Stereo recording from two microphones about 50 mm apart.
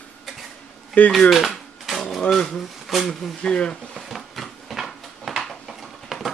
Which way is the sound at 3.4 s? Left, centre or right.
Centre.